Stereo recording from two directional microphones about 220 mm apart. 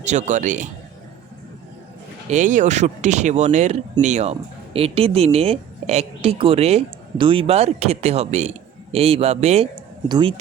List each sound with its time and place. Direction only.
0.0 s speech: 30° right (ahead or behind)
2.3 s speech: 35° right (ahead or behind)